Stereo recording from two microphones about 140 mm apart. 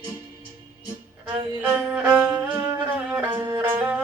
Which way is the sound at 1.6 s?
10° right (ahead or behind).